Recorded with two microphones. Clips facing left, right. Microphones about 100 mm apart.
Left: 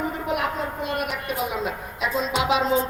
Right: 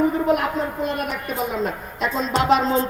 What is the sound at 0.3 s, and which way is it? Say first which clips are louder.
A man's voice: right 3 dB; 5° left (ahead or behind).